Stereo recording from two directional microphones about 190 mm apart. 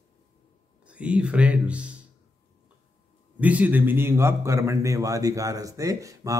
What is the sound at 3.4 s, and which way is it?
A man's voice, 10° right (ahead or behind).